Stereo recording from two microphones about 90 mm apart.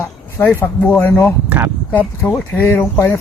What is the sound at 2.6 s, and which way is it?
Speech, 20° left (ahead or behind).